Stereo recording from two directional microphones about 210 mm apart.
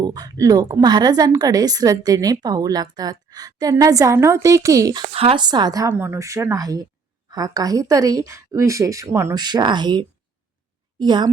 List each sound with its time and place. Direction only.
0.0 s a woman's voice: 20° right (ahead or behind)
5.1 s a woman's voice: 25° right (ahead or behind)